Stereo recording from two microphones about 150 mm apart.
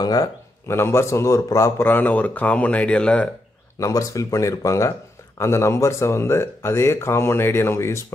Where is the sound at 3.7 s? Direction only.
20° left (ahead or behind).